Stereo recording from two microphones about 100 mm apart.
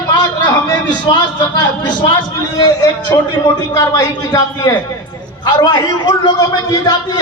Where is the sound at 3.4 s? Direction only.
40° left (ahead or behind).